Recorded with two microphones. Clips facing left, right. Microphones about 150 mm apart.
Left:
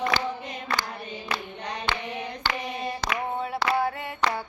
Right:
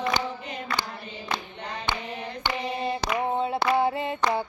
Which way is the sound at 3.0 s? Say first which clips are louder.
Right 3 dB; 20° right (ahead or behind).